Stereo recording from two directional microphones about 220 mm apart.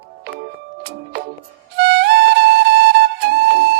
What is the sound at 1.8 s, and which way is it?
Music, 45° right (ahead or behind).